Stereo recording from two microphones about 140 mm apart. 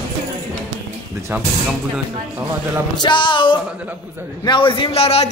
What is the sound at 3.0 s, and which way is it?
Music, 35° left (ahead or behind).